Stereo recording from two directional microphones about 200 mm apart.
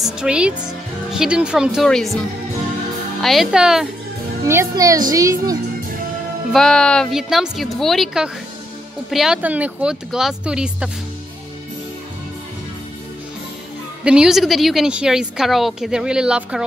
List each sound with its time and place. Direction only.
0.0 s a woman's voice: 5° right (ahead or behind)
4.5 s speech: 15° right (ahead or behind)
6.5 s a woman's voice: centre (ahead or behind)
14.0 s a woman's voice: 5° right (ahead or behind)